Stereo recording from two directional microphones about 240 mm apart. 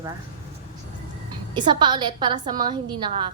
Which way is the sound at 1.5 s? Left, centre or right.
Centre.